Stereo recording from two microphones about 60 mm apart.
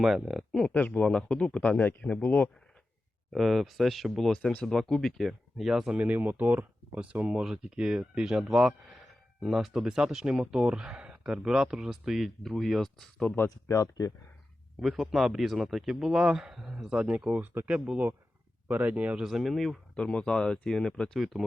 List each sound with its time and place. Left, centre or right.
0.0 s speech: centre
0.7 s a man's voice: left
1.8 s a man's voice: left
3.3 s speech: centre
5.9 s speech: right; by 9.8 s centre
9.8 s speech: centre
13.7 s speech: left
14.8 s speech: centre; by 19.2 s right
19.2 s speech: centre
20.0 s speech: centre